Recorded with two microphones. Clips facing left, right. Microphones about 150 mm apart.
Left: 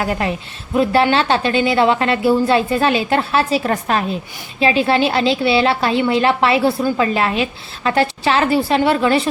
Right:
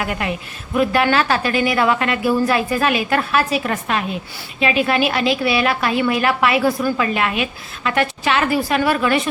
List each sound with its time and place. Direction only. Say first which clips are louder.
0.0 s a woman's voice: left 3 dB; 30° left (ahead or behind)